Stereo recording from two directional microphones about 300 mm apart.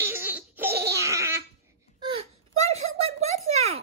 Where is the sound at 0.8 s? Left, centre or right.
Centre.